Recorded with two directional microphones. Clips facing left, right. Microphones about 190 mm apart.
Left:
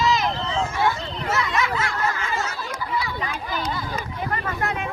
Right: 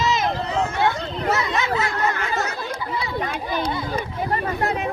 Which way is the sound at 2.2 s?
40° right (ahead or behind).